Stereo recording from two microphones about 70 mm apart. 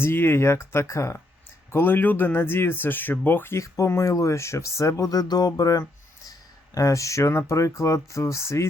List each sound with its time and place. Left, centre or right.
0.0 s speech: left
1.7 s speech: left
3.6 s speech: left
6.7 s speech: left